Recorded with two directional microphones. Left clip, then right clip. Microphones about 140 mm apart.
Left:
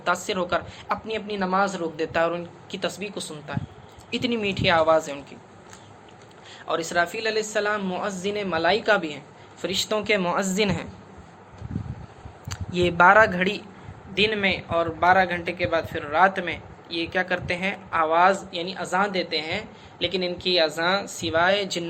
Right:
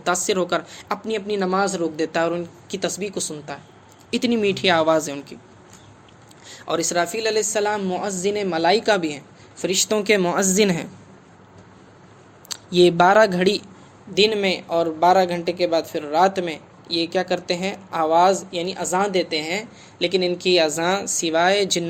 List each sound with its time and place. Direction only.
0.0 s a woman's voice: 55° right (ahead or behind)
6.5 s a woman's voice: 55° right (ahead or behind)
12.5 s speech: 50° right (ahead or behind)
14.2 s a man's voice: 60° right (ahead or behind)